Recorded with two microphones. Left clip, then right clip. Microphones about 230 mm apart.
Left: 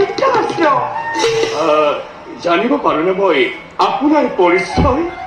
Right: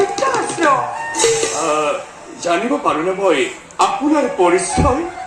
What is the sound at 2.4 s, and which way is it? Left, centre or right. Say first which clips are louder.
A man's voice: left 3 dB; right.